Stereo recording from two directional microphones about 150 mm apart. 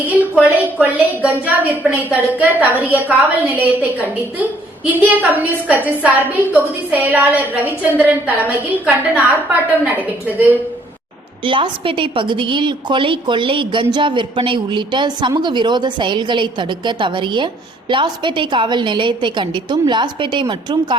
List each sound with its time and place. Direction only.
0.1 s a woman's voice: 10° right (ahead or behind)
11.4 s speech: 35° right (ahead or behind)